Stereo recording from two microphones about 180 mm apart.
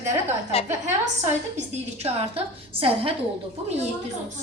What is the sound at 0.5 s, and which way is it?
Speech, 35° left (ahead or behind).